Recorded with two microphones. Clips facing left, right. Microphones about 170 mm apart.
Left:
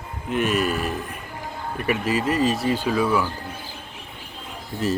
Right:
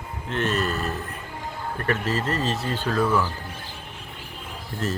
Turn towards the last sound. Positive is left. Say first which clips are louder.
# left 4 dB
turn(degrees=0)  # may be behind; listen again after turning